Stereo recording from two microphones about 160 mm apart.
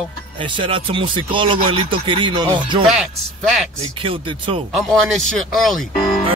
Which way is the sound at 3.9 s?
35° right (ahead or behind).